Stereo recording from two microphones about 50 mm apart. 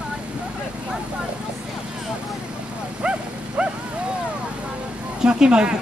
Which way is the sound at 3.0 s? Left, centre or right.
Centre.